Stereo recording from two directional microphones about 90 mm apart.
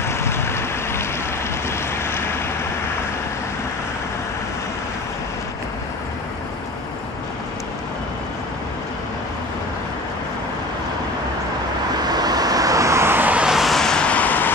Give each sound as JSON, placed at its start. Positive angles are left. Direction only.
{"t": 0.0, "sound": "a sound", "side_deg": 30}
{"t": 1.7, "sound": "vehicle", "side_deg": 30}
{"t": 12.0, "sound": "vehicle", "side_deg": -50}
{"t": 13.5, "sound": "vehicle", "side_deg": 0}